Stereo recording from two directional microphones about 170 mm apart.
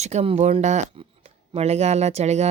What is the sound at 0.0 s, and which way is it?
Speech, 40° right (ahead or behind).